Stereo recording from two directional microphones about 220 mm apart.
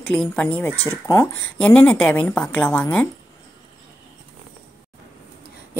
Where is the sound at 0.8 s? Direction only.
25° left (ahead or behind).